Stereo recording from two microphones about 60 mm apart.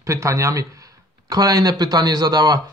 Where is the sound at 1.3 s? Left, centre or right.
Right.